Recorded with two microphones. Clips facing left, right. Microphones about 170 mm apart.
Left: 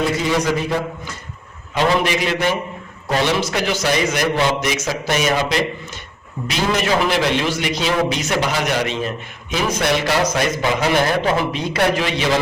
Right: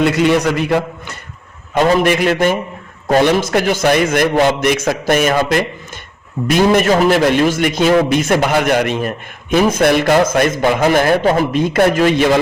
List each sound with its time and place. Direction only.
0.0 s a man's voice: 70° right (ahead or behind)
1.7 s a man's voice: 50° right (ahead or behind)